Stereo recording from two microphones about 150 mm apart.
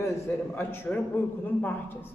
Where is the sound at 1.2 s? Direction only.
15° left (ahead or behind).